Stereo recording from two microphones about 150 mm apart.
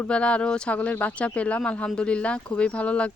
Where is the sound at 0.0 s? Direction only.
5° left (ahead or behind).